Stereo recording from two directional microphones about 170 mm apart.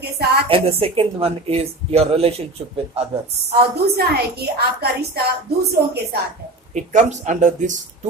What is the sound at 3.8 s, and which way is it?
A woman's voice, 70° right (ahead or behind).